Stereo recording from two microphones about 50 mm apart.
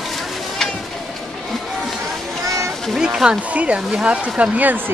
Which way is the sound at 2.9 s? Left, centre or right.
Centre.